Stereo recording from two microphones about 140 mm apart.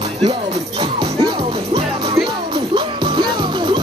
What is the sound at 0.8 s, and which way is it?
Music, 35° right (ahead or behind).